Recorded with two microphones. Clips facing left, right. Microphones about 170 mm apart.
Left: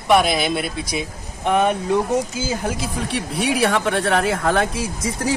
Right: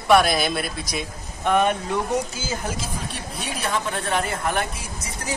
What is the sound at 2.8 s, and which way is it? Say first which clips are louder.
Speech: left 7 dB; 70° left (ahead or behind).